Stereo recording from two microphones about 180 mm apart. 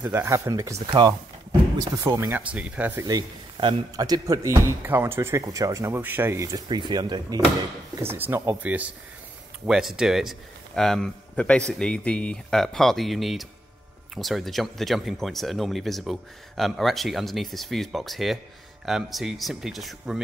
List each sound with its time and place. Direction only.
0.0 s a man's voice: 15° right (ahead or behind)
3.1 s a man's voice: 25° right (ahead or behind); by 20.2 s centre (ahead or behind)